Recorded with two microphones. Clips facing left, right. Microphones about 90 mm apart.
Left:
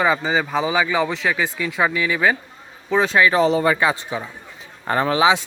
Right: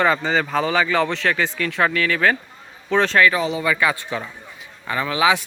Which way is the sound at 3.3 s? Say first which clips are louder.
Left 5 dB; 40° left (ahead or behind).